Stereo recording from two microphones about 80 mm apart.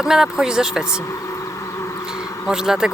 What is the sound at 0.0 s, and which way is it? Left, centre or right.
Speech, centre.